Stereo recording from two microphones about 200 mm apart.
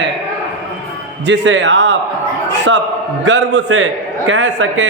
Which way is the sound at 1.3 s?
60° right (ahead or behind).